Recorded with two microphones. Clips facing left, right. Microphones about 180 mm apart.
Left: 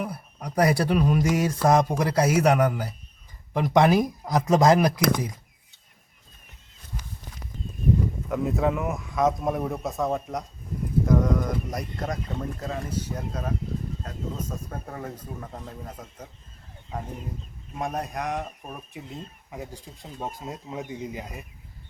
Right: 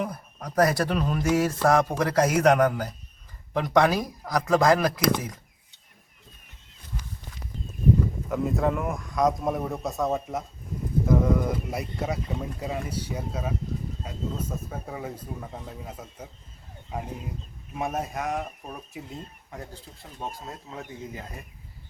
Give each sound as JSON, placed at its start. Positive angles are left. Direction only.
{"t": 0.0, "sound": "speech", "side_deg": 10}
{"t": 8.3, "sound": "speech", "side_deg": 0}